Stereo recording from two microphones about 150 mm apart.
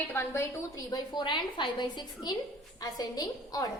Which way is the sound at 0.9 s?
30° left (ahead or behind).